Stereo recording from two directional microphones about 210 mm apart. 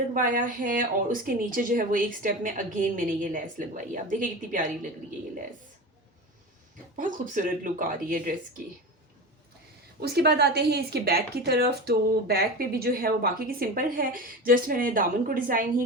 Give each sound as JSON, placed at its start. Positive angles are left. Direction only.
{"t": 0.1, "sound": "speech", "side_deg": -40}
{"t": 6.9, "sound": "speech", "side_deg": -40}
{"t": 10.0, "sound": "speech", "side_deg": -50}